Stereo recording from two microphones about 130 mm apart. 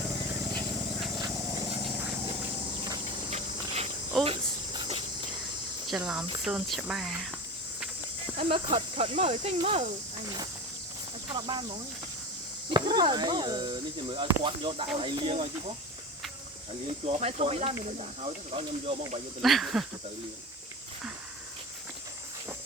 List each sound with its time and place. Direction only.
1.1 s a sound: 30° right (ahead or behind)
2.2 s a sound: 40° right (ahead or behind)
3.7 s cricket: 50° right (ahead or behind)
4.2 s cricket: 40° right (ahead or behind)
6.0 s speech: 10° right (ahead or behind)
8.4 s speech: 45° right (ahead or behind)
10.2 s speech: 35° right (ahead or behind)
12.7 s speech: 35° right (ahead or behind)
17.2 s speech: 55° right (ahead or behind)
19.4 s speech: centre (ahead or behind)